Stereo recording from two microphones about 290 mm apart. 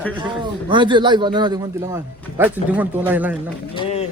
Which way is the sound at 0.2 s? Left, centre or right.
Centre.